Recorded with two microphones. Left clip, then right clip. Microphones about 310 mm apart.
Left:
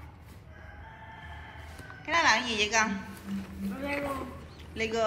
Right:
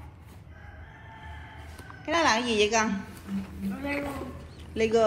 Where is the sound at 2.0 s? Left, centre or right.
Centre.